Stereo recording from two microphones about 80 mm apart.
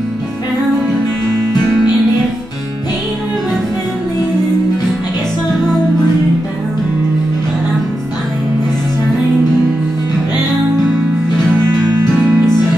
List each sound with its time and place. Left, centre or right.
12.2 s music: right